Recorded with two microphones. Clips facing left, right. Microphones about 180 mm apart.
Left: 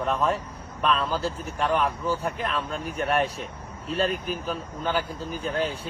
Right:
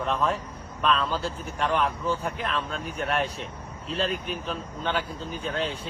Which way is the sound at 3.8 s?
30° right (ahead or behind).